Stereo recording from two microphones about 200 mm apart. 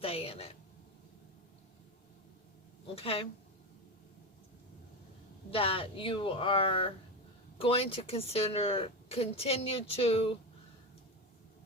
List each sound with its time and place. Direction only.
0.0 s a woman's voice: 30° left (ahead or behind)
2.9 s speech: 30° left (ahead or behind)
5.5 s speech: 30° left (ahead or behind)